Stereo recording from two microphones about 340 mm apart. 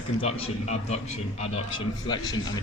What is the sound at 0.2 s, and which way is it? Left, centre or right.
A man's voice, centre.